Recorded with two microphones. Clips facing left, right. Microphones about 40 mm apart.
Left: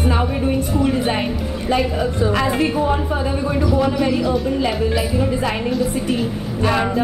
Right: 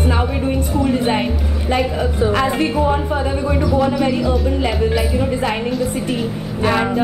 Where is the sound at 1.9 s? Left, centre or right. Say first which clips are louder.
Right 1 dB; right.